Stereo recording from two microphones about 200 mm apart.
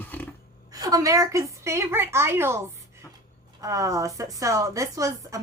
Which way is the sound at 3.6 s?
15° right (ahead or behind).